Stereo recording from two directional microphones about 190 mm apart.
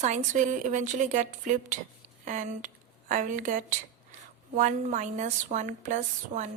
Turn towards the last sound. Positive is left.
turn(degrees=-40)  # may be behind; listen again after turning